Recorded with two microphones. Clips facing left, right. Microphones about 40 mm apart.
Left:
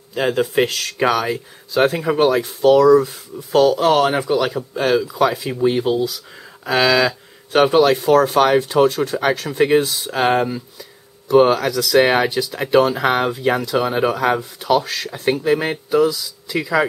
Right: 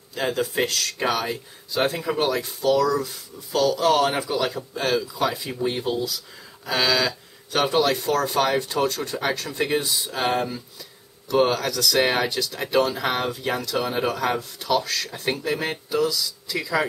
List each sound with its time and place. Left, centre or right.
0.1 s speech: left
2.6 s speech: left
4.0 s speech: centre